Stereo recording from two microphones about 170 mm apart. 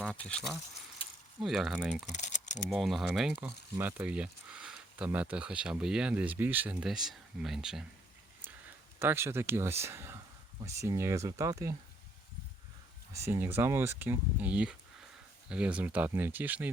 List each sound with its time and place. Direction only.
0.0 s speech: 5° left (ahead or behind)
1.0 s keys jangling: 35° left (ahead or behind)
1.4 s speech: centre (ahead or behind)
2.1 s typing: 45° left (ahead or behind)
2.6 s speech: centre (ahead or behind)
9.0 s speech: 15° right (ahead or behind)
13.2 s speech: 15° right (ahead or behind)